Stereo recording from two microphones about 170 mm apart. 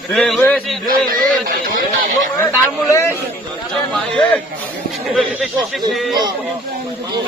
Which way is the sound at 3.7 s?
5° left (ahead or behind).